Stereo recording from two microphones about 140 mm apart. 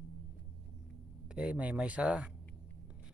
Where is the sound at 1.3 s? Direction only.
5° right (ahead or behind).